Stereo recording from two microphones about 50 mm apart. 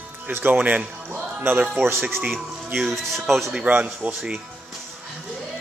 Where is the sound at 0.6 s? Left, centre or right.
Right.